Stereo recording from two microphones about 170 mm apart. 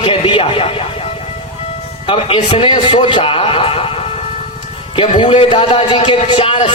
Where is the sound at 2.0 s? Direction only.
30° left (ahead or behind).